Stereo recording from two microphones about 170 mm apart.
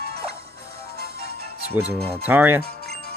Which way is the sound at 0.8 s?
65° right (ahead or behind).